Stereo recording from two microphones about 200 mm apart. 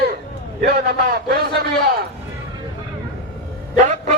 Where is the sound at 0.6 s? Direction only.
50° right (ahead or behind).